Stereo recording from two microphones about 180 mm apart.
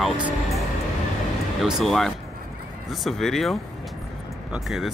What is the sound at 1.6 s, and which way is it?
Speech, centre (ahead or behind).